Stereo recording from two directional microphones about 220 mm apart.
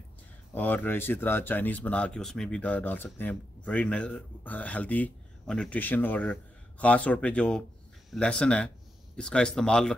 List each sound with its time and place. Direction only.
0.6 s speech: 10° left (ahead or behind)